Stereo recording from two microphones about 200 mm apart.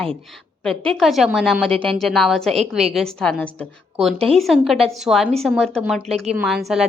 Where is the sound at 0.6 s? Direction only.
5° left (ahead or behind).